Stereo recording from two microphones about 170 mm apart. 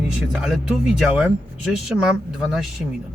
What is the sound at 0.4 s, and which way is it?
Speech, centre (ahead or behind).